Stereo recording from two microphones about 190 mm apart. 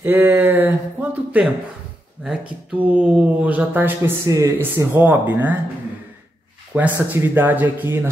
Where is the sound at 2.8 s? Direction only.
10° right (ahead or behind).